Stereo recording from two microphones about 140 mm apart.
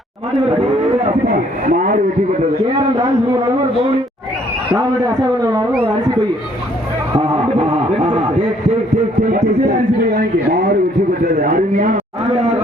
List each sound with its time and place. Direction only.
1.0 s speech: 75° right (ahead or behind)
4.7 s a man's voice: 25° right (ahead or behind)
7.2 s a sound: 45° right (ahead or behind)
11.3 s speech: 75° right (ahead or behind)